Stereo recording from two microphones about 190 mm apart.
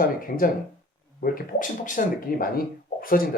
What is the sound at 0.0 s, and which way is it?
A man's voice, 50° left (ahead or behind).